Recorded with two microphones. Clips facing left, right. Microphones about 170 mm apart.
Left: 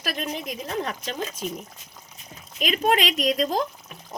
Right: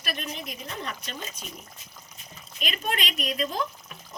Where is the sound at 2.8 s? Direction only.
90° left.